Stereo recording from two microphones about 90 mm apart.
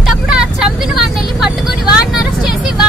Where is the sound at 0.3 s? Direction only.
5° right (ahead or behind).